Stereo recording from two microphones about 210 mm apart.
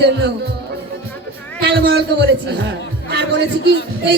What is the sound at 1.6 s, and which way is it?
A man's voice, 50° right (ahead or behind).